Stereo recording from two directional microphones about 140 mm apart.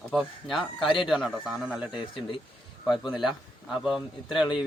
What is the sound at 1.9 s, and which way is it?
Speech, 35° left (ahead or behind).